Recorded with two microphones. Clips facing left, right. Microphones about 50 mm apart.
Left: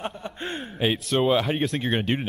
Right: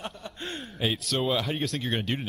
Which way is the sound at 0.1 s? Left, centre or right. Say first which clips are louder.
Left 5 dB; left.